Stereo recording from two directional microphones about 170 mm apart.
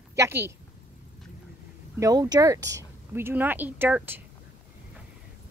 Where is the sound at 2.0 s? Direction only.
20° right (ahead or behind).